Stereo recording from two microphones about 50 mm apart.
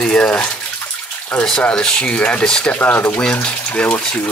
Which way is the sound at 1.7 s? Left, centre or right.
Left.